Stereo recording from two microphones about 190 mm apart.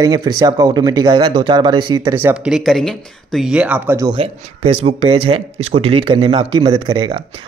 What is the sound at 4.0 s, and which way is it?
Speech, 25° right (ahead or behind).